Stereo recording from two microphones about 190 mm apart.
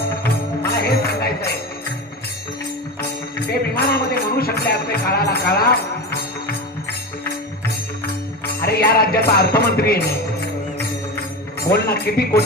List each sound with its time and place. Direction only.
0.9 s music: 55° left (ahead or behind)
3.3 s music: 55° left (ahead or behind)
8.6 s music: 55° left (ahead or behind)
11.7 s music: 55° left (ahead or behind)